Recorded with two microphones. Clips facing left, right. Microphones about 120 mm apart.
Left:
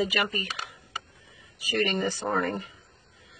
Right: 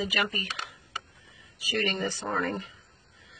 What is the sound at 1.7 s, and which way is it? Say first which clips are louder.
Speech: left 3 dB; 50° left (ahead or behind).